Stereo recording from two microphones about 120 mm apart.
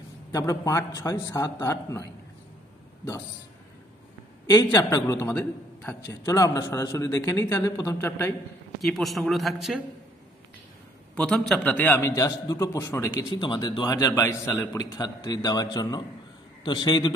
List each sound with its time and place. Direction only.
0.3 s a man's voice: 30° left (ahead or behind)
4.6 s a man's voice: 25° left (ahead or behind)
8.8 s speech: centre (ahead or behind)
11.1 s a man's voice: 5° left (ahead or behind)
12.2 s a man's voice: 30° left (ahead or behind)
13.4 s a man's voice: 40° left (ahead or behind)
13.8 s a man's voice: 30° left (ahead or behind)